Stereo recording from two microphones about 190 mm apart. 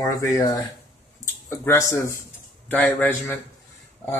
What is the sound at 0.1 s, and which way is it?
Speech, 20° left (ahead or behind).